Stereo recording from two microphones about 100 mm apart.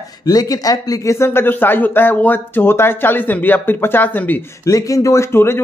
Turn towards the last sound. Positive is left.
turn(degrees=25)  # may be behind; listen again after turning